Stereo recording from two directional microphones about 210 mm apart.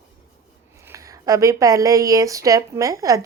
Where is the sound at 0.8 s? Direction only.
15° right (ahead or behind).